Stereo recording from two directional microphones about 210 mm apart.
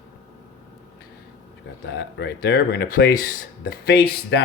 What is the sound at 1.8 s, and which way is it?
Speech, 55° left (ahead or behind).